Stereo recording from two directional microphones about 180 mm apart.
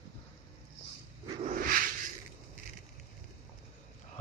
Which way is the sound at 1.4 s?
50° right (ahead or behind).